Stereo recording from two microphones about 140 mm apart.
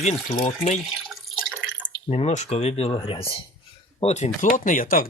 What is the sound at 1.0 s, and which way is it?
Drip, centre (ahead or behind).